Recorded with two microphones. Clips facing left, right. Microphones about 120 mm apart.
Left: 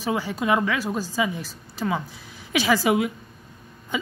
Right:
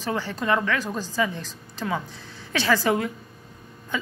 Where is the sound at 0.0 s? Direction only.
15° left (ahead or behind).